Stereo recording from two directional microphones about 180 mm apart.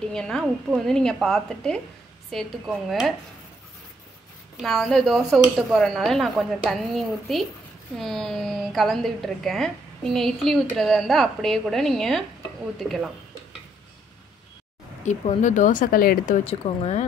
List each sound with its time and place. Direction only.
0.0 s a woman's voice: 5° left (ahead or behind)
4.6 s a woman's voice: centre (ahead or behind)
15.0 s speech: 45° left (ahead or behind)
16.4 s speech: 35° left (ahead or behind)